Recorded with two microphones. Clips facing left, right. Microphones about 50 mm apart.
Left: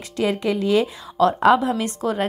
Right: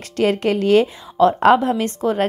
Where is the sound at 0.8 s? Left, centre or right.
Right.